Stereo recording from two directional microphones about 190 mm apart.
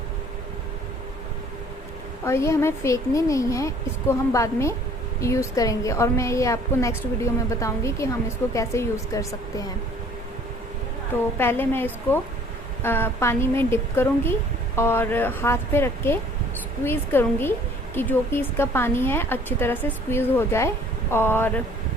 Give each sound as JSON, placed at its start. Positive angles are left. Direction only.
{"t": 2.2, "sound": "a woman's voice", "side_deg": 15}
{"t": 11.3, "sound": "a woman's voice", "side_deg": 10}